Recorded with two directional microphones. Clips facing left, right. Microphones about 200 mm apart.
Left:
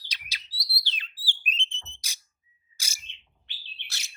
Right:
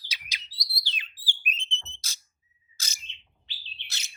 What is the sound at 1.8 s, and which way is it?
Alarm, 15° left (ahead or behind).